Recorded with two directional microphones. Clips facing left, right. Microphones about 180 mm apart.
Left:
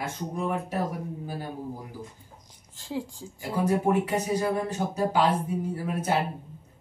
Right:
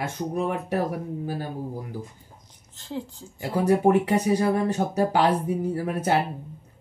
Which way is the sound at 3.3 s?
65° right (ahead or behind).